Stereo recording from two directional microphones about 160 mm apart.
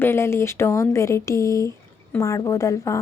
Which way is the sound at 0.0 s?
15° left (ahead or behind).